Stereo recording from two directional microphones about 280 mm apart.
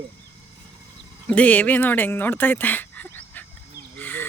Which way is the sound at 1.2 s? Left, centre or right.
Centre.